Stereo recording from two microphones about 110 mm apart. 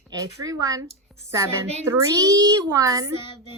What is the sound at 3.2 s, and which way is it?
Child singing, 50° left (ahead or behind).